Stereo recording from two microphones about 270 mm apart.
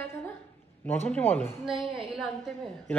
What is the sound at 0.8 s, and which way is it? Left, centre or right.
Speech, centre.